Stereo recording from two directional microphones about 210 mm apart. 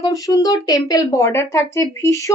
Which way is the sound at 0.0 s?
15° left (ahead or behind).